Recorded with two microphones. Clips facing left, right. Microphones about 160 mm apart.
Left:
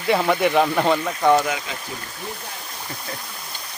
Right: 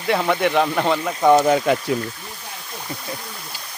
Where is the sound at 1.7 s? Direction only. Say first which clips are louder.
Right 15 dB; 55° right (ahead or behind).